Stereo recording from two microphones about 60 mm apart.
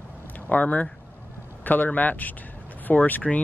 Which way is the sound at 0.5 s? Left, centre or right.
Left.